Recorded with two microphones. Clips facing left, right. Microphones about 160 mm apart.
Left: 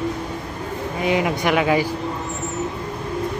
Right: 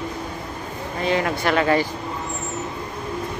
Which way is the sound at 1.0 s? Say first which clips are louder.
Left 1 dB; 15° left (ahead or behind).